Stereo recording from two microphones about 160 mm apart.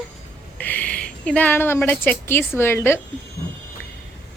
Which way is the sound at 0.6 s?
10° left (ahead or behind).